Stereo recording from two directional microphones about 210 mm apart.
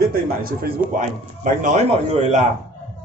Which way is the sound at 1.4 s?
35° right (ahead or behind).